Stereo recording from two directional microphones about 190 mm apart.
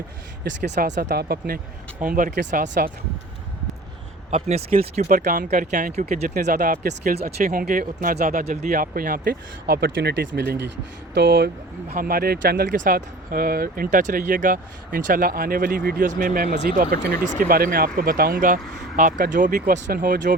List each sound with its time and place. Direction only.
0.4 s speech: 65° right (ahead or behind); by 2.9 s 45° right (ahead or behind)
4.3 s speech: 35° right (ahead or behind); by 11.5 s 65° right (ahead or behind)
11.9 s speech: 50° right (ahead or behind)